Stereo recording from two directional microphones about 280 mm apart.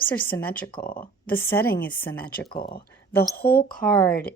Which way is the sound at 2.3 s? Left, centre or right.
Left.